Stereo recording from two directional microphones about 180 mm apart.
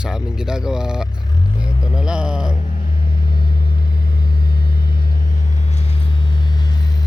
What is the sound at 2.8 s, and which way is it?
Vehicle, 50° left (ahead or behind).